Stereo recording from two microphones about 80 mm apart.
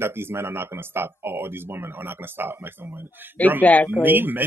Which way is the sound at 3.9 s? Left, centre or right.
Right.